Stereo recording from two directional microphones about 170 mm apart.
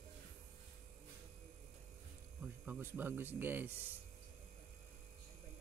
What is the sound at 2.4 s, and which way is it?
Speech, 10° right (ahead or behind).